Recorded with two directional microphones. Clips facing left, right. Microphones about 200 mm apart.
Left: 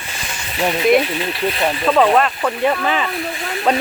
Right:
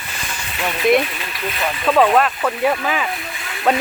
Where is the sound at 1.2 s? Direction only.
30° left (ahead or behind).